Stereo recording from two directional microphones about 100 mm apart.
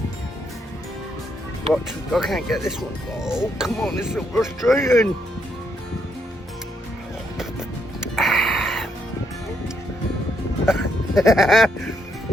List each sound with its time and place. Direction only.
1.7 s speech: centre (ahead or behind)
4.7 s speech: 25° left (ahead or behind)
8.1 s a sound: centre (ahead or behind)
10.7 s music: 5° right (ahead or behind)